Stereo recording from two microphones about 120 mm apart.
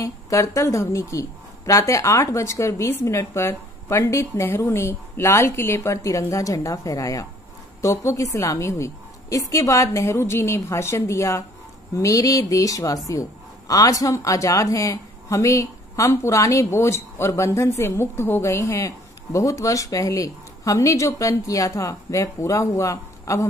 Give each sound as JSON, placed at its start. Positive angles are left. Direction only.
{"t": 0.0, "sound": "speech", "side_deg": 25}